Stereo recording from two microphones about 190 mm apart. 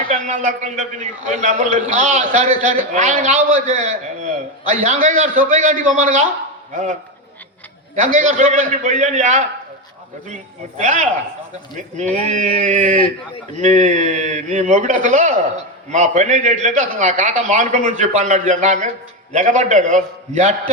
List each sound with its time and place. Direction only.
0.1 s a man's voice: 40° right (ahead or behind)
7.9 s a man's voice: 40° right (ahead or behind)
10.8 s a man's voice: 40° right (ahead or behind)
12.3 s a man's voice: 40° right (ahead or behind)